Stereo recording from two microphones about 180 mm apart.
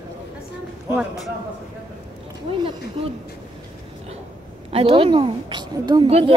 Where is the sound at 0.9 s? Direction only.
Centre (ahead or behind).